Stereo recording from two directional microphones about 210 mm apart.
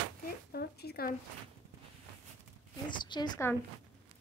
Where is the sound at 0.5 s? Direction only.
50° left (ahead or behind).